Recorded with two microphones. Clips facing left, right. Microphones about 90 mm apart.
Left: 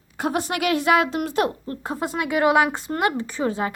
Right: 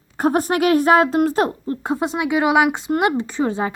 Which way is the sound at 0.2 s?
45° right (ahead or behind).